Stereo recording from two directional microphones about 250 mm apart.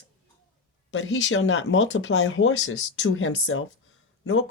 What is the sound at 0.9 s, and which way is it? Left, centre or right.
Speech, left.